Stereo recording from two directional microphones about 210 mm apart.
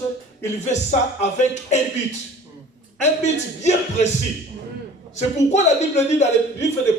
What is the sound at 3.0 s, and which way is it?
Speech, 35° left (ahead or behind).